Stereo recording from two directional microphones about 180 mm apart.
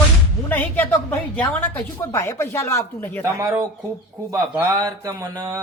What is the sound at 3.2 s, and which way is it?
A man's voice, 15° right (ahead or behind).